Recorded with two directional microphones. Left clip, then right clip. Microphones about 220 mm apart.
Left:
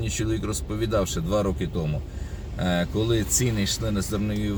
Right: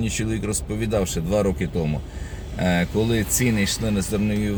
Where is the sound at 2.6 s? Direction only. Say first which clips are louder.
Right 3 dB; 5° right (ahead or behind).